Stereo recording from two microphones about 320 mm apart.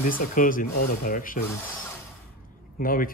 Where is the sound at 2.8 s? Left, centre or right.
Left.